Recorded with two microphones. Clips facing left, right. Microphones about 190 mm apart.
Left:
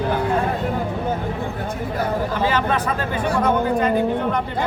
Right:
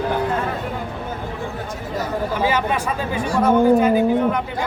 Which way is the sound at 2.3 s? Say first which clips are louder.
Right 2 dB; 10° right (ahead or behind).